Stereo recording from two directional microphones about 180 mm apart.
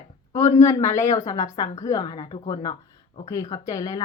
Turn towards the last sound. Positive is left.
turn(degrees=20)  # may be behind; listen again after turning